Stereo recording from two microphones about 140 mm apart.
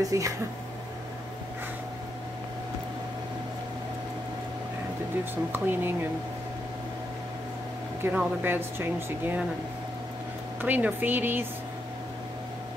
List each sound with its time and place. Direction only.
0.0 s speech: 20° right (ahead or behind)
5.5 s speech: 15° right (ahead or behind)
8.0 s speech: 10° right (ahead or behind)
10.6 s speech: 15° right (ahead or behind)